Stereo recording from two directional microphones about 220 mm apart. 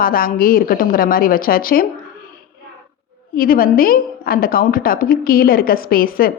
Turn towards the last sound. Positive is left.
turn(degrees=40)  # may be behind; listen again after turning